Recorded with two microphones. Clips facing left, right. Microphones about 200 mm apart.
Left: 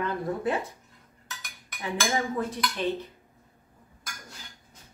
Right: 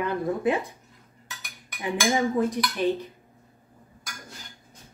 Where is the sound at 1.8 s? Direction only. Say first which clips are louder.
Right 4 dB; 15° right (ahead or behind).